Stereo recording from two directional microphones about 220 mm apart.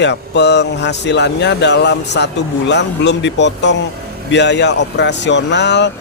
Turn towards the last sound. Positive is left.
turn(degrees=50)  # may be behind; listen again after turning